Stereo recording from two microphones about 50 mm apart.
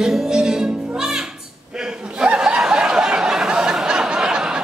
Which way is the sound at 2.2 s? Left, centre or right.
Centre.